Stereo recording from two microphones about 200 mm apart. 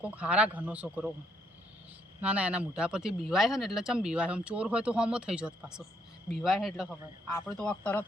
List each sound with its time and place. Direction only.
0.0 s speech: 5° right (ahead or behind)
2.2 s speech: 5° right (ahead or behind)